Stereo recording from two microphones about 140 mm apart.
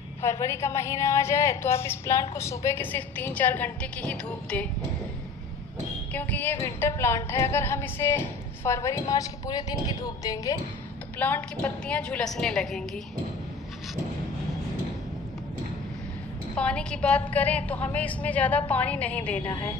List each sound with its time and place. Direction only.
0.2 s a woman's voice: 20° left (ahead or behind)
6.1 s a woman's voice: 15° left (ahead or behind)
11.1 s a woman's voice: 10° left (ahead or behind)
16.5 s a woman's voice: 10° left (ahead or behind)